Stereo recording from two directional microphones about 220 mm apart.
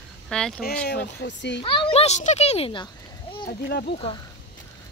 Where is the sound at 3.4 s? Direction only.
45° left (ahead or behind).